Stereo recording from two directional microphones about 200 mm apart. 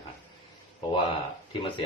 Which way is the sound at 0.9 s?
25° left (ahead or behind).